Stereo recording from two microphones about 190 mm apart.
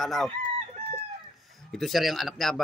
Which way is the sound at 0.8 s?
35° right (ahead or behind).